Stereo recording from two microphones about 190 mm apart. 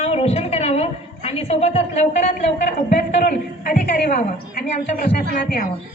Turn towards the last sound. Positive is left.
turn(degrees=45)  # may be behind; listen again after turning